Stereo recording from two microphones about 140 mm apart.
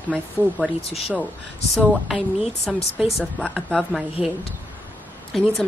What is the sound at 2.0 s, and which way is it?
A woman's voice, centre (ahead or behind).